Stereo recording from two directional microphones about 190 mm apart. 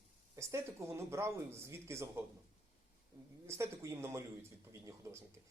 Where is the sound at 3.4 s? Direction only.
15° right (ahead or behind).